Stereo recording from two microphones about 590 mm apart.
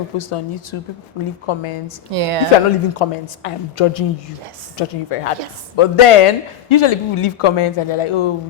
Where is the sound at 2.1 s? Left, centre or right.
Right.